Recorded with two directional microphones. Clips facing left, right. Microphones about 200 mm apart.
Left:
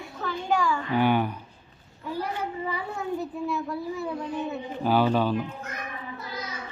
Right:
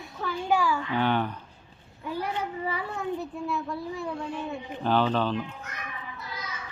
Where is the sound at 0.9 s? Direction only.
10° left (ahead or behind).